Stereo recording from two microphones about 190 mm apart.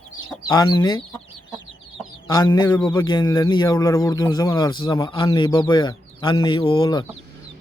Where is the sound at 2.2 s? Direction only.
20° left (ahead or behind).